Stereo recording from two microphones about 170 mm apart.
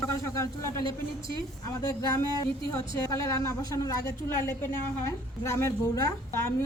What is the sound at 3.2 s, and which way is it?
A woman's voice, 20° left (ahead or behind).